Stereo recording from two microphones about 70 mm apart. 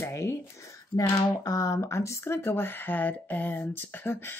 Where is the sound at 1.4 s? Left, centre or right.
Left.